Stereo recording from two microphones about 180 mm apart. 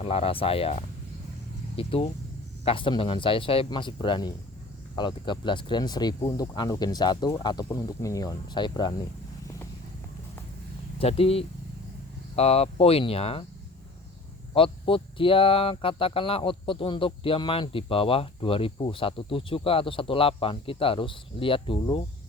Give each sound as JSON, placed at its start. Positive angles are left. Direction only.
{"t": 0.0, "sound": "speech", "side_deg": 35}
{"t": 11.0, "sound": "speech", "side_deg": 35}
{"t": 14.5, "sound": "speech", "side_deg": 30}